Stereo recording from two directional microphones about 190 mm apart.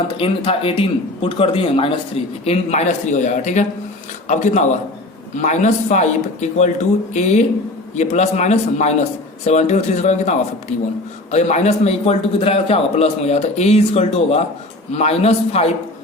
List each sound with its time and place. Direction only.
0.2 s speech: 30° left (ahead or behind)